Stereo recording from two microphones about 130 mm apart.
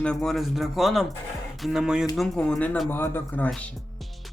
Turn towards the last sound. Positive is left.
turn(degrees=0)  # may be behind; listen again after turning